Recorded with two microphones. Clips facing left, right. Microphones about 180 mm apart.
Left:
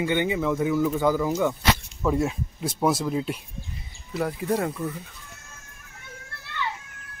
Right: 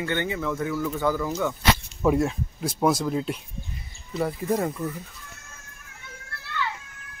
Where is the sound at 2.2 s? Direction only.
5° left (ahead or behind).